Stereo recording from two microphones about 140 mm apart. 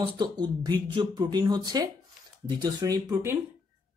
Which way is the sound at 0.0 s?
30° right (ahead or behind).